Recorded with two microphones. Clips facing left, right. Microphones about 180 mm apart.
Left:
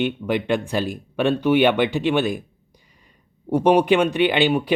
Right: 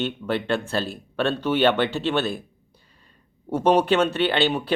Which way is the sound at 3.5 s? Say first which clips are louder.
Left 3 dB; 15° left (ahead or behind).